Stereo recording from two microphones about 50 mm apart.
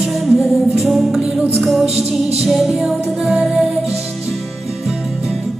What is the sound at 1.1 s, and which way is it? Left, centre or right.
Music, centre.